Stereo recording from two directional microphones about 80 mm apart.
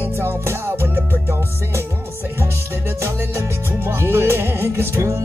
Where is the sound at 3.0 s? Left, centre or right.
Right.